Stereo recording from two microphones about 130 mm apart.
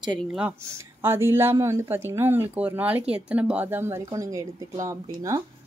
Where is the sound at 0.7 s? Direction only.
20° right (ahead or behind).